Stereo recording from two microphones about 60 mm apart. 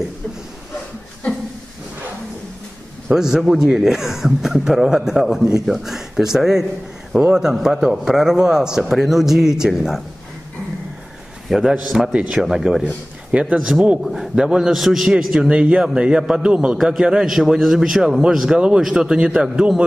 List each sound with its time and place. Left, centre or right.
3.2 s speech: centre
11.4 s a man's voice: centre
12.8 s a man's voice: centre
16.7 s a man's voice: centre